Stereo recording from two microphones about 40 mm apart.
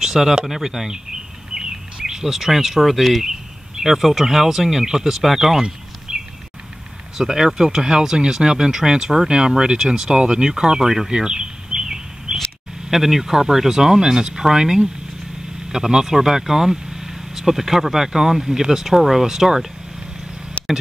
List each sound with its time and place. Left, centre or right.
0.0 s a sound: centre
0.5 s speech: centre
1.5 s bird vocalization: centre
3.8 s speech: centre
5.6 s a sound: centre
7.2 s speech: centre
11.1 s bird: centre
12.9 s speech: centre